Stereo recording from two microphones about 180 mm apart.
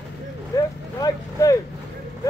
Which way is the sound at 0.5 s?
20° left (ahead or behind).